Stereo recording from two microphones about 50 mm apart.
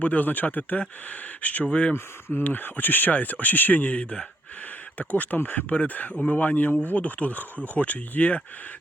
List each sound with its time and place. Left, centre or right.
0.0 s speech: left
2.4 s speech: left